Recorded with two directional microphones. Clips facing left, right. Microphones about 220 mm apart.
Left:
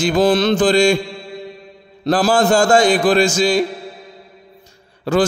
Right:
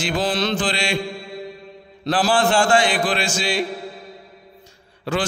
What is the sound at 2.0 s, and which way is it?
Mantra, 40° left (ahead or behind).